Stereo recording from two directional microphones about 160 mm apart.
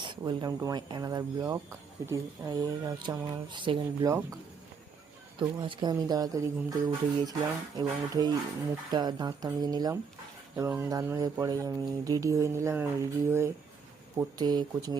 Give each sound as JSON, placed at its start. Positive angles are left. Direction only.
{"t": 0.0, "sound": "speech", "side_deg": -30}
{"t": 5.4, "sound": "speech", "side_deg": -30}